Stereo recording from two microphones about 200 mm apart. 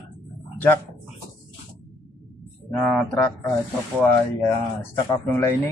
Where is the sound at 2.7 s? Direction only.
5° left (ahead or behind).